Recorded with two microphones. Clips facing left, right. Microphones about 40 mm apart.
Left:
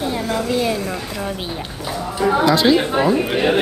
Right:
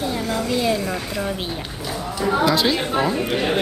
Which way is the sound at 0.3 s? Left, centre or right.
Centre.